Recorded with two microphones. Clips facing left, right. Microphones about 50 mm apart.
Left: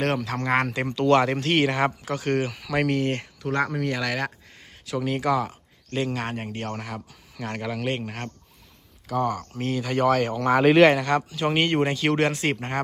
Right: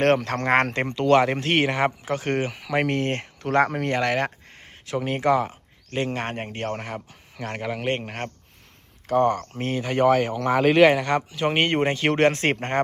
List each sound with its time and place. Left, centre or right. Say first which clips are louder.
0.0 s speech: right 5 dB; right
1.0 s speech: right 1 dB; centre
1.4 s speech: even; right
4.1 s a sound: right 4 dB; right
4.9 s speech: right 2 dB; right
7.9 s speech: right 2 dB; right; by 10.3 s centre
10.3 s speech: left 1 dB; centre
11.0 s speech: even; right